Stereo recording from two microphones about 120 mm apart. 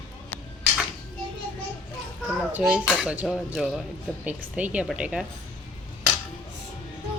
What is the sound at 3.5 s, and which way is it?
Speech, 5° right (ahead or behind).